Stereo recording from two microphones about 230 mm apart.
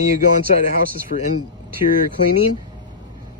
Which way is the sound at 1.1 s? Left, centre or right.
Left.